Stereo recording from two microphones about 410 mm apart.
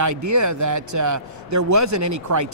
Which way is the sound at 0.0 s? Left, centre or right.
Right.